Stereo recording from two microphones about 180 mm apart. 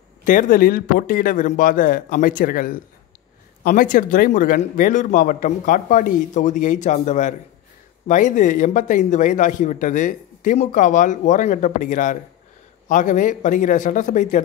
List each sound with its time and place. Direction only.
0.2 s speech: 45° left (ahead or behind)